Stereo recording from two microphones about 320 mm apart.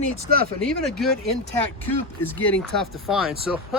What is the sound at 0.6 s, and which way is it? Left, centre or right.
Speech, centre.